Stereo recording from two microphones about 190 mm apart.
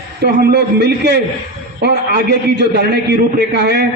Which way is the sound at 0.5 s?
60° right (ahead or behind).